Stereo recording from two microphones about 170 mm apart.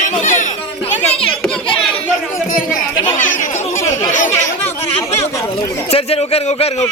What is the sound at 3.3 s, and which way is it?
Speech, 45° left (ahead or behind).